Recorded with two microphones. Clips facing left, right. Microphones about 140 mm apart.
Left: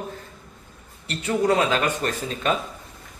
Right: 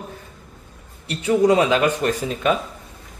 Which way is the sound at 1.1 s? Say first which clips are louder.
Right 5 dB; 10° right (ahead or behind).